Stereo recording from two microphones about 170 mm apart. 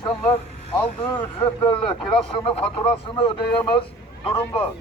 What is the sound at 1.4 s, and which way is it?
Speech, 20° left (ahead or behind).